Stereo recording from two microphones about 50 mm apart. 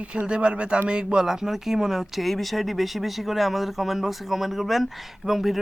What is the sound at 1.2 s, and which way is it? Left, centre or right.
Speech, centre.